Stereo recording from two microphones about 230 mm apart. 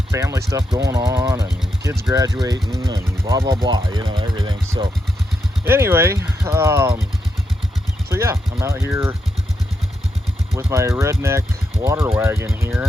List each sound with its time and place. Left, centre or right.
0.1 s speech: centre
5.6 s speech: centre
8.1 s speech: centre
10.5 s speech: centre